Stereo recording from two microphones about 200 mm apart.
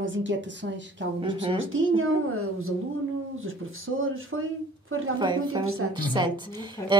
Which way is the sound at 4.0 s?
90° right.